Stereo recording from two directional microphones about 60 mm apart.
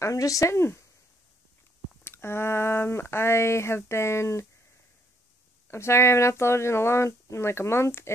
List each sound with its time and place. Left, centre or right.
0.0 s speech: left
2.0 s speech: left
5.7 s speech: left